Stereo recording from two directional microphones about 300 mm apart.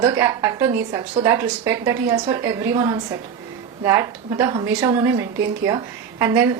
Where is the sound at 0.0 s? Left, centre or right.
Centre.